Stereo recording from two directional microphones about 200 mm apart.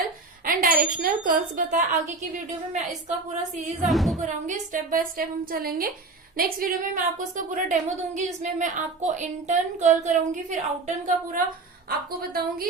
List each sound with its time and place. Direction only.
0.4 s a woman's voice: 45° right (ahead or behind)
3.8 s speech: centre (ahead or behind)
4.2 s a woman's voice: 35° right (ahead or behind)